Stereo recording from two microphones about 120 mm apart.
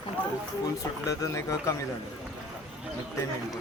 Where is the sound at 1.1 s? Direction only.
25° left (ahead or behind).